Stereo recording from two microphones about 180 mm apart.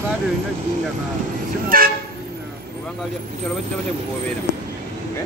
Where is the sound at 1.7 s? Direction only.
55° right (ahead or behind).